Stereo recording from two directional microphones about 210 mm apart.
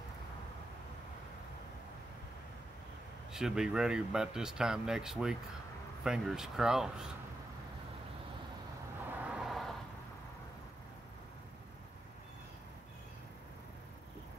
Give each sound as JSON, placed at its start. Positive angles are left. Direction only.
{"t": 3.3, "sound": "speech", "side_deg": -5}
{"t": 9.2, "sound": "vehicle", "side_deg": -5}